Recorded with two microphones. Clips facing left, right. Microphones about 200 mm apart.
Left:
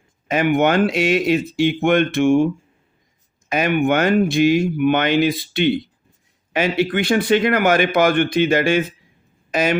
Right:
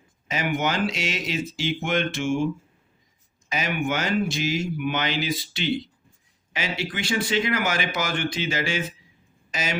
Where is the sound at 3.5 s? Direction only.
55° left (ahead or behind).